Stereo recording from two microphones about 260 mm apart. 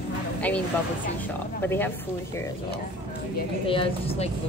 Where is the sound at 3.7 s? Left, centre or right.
Left.